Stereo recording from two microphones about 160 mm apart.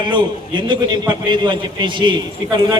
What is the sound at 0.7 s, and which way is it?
A man's voice, 30° right (ahead or behind).